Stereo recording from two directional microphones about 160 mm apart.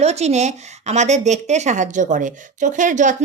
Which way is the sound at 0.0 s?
45° right (ahead or behind).